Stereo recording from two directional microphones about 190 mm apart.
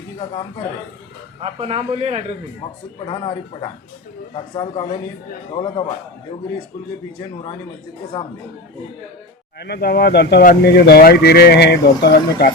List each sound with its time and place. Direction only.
1.4 s a man's voice: 30° right (ahead or behind)
3.1 s speech: 25° left (ahead or behind)
9.6 s speech: 60° left (ahead or behind)